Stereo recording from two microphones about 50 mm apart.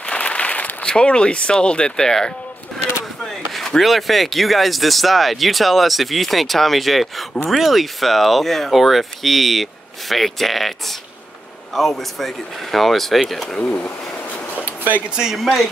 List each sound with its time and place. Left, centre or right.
0.0 s a sound: left
0.8 s speech: centre
3.5 s speech: centre
13.7 s a sound: left
15.0 s speech: centre
15.3 s speech: centre